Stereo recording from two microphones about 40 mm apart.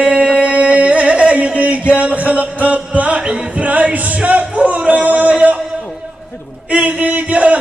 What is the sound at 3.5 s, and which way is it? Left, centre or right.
Singing, right.